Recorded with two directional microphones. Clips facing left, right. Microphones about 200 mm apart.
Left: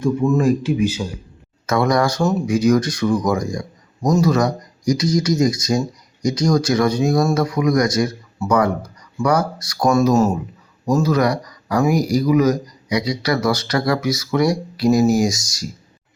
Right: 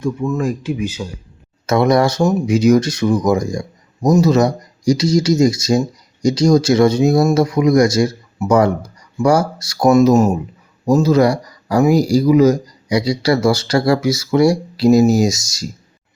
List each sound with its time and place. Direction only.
0.2 s speech: 5° left (ahead or behind)
1.6 s speech: 25° right (ahead or behind)